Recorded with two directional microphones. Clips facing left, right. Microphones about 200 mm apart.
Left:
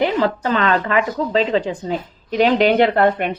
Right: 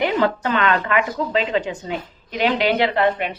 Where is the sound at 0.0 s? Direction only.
35° left (ahead or behind).